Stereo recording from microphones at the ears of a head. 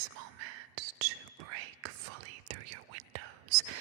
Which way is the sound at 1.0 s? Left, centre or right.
Right.